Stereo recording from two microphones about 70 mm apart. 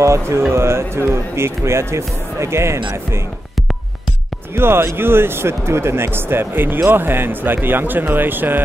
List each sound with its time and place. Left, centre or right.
0.0 s speech: right
4.6 s speech: right